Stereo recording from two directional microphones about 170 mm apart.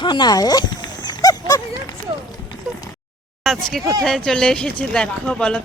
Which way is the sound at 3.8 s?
20° right (ahead or behind).